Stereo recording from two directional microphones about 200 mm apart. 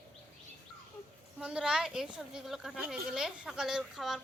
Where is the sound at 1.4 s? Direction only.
5° right (ahead or behind).